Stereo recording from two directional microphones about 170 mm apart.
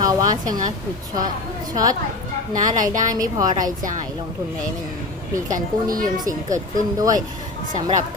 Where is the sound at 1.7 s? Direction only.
20° right (ahead or behind).